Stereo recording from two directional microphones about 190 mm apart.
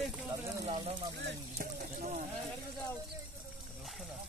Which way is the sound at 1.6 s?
45° right (ahead or behind).